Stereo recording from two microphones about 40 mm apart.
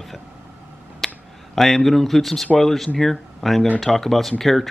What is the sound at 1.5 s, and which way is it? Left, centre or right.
Speech, centre.